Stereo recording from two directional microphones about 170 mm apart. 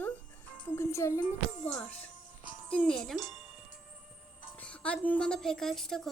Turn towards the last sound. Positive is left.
turn(degrees=0)  # may be behind; listen again after turning